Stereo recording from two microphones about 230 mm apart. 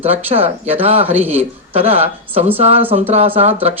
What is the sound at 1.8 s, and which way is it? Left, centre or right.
Speech, right.